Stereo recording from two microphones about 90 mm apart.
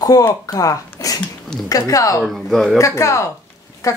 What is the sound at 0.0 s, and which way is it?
A woman's voice, 40° left (ahead or behind).